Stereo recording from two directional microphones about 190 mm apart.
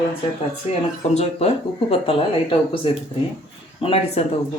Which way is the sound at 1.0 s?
35° left (ahead or behind).